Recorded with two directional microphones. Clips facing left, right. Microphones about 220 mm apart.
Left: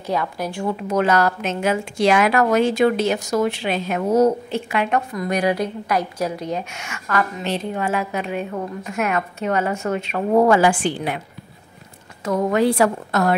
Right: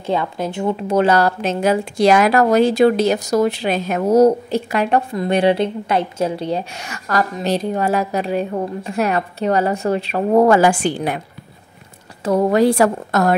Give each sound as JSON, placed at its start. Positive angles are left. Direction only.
{"t": 0.0, "sound": "a woman's voice", "side_deg": -25}
{"t": 12.3, "sound": "a woman's voice", "side_deg": -35}